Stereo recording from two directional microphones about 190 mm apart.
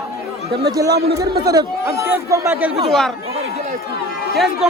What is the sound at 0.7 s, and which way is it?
Speech, 20° right (ahead or behind).